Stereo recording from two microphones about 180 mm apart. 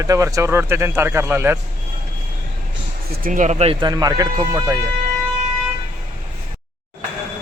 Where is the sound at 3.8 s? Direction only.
20° right (ahead or behind).